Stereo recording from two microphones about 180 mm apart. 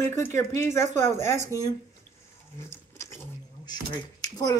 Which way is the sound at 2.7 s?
15° left (ahead or behind).